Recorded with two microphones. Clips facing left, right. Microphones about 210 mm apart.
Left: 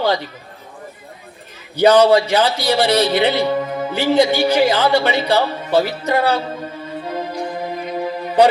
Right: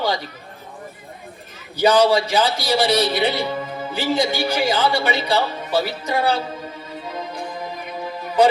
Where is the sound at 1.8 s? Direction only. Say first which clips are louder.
Left 4 dB; 60° left (ahead or behind).